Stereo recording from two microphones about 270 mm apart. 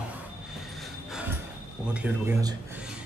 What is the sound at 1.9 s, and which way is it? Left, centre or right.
Speech, centre.